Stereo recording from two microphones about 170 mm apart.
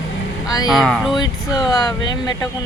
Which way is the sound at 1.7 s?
20° left (ahead or behind).